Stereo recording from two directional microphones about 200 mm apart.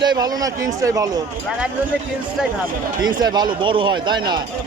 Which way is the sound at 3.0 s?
20° right (ahead or behind).